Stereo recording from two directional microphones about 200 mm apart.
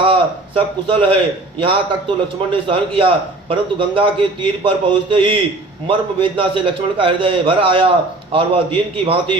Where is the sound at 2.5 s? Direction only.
25° right (ahead or behind).